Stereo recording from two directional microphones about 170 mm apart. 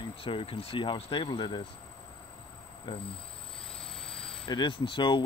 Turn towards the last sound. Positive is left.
turn(degrees=30)  # may be behind; listen again after turning